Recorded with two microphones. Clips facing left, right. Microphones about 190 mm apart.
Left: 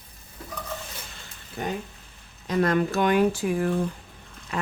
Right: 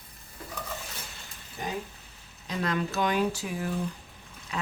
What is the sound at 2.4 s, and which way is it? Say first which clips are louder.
Speech: left 7 dB; 50° left (ahead or behind).